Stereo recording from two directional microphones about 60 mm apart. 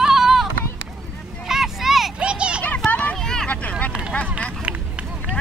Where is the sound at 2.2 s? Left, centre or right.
Centre.